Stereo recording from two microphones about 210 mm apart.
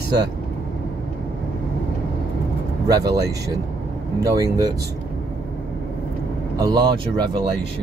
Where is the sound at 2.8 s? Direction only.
15° right (ahead or behind).